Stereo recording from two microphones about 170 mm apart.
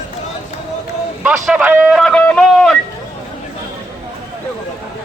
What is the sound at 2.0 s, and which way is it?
Speech, 5° left (ahead or behind).